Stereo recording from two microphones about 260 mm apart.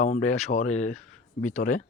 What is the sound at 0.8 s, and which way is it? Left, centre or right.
Speech, centre.